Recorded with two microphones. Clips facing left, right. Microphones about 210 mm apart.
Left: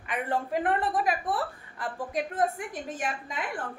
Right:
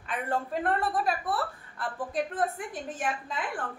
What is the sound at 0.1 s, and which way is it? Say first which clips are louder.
A woman's voice: left 2 dB; 15° left (ahead or behind).